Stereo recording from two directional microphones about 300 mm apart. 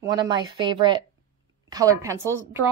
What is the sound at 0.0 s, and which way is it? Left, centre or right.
A woman's voice, centre.